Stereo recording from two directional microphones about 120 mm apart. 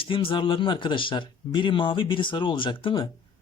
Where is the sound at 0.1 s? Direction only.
45° left (ahead or behind).